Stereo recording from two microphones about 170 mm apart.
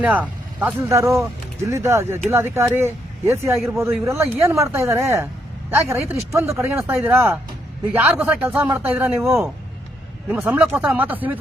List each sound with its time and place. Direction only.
0.0 s speech: 10° right (ahead or behind)